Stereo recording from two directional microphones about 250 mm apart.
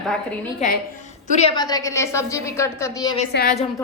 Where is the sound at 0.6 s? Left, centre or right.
Left.